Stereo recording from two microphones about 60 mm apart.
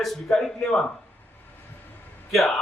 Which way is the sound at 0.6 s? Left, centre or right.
Left.